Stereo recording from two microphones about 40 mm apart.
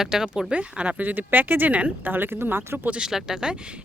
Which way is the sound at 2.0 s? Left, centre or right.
Right.